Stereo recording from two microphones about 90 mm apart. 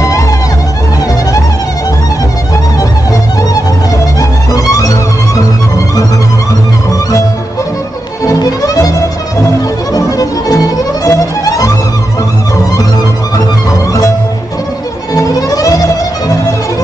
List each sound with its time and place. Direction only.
4.2 s music: 40° left (ahead or behind)
8.3 s music: 45° left (ahead or behind)
9.9 s music: 40° left (ahead or behind)
15.1 s music: 40° left (ahead or behind)